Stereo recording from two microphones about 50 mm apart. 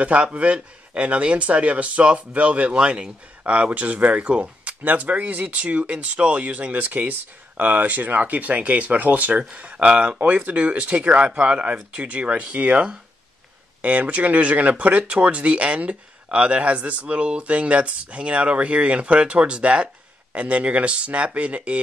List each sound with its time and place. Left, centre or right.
0.0 s speech: right